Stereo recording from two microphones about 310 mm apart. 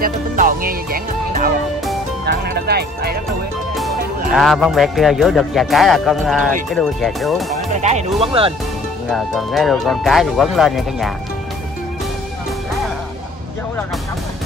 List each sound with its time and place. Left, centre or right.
0.0 s music: right
2.2 s speech: right
4.4 s speech: centre
7.8 s speech: centre
9.1 s speech: centre